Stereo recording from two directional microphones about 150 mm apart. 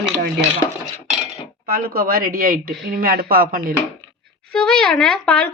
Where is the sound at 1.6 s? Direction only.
90° right; by 3.7 s 75° right (ahead or behind).